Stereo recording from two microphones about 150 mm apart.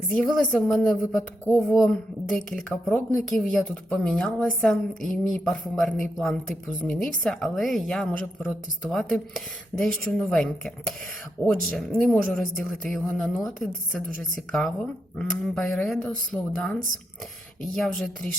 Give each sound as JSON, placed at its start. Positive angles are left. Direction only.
{"t": 0.1, "sound": "a woman's voice", "side_deg": 5}
{"t": 17.7, "sound": "speech", "side_deg": 5}